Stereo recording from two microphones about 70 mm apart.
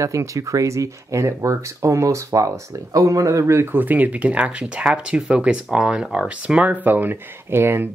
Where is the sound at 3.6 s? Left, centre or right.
Right.